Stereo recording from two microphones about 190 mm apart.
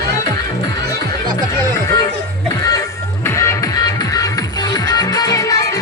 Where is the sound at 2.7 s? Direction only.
15° left (ahead or behind).